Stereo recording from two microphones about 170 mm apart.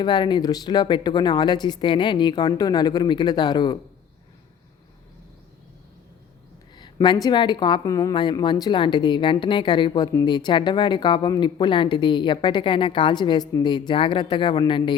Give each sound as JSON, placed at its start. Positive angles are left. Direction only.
{"t": 0.0, "sound": "a woman's voice", "side_deg": 25}
{"t": 6.7, "sound": "a woman's voice", "side_deg": 25}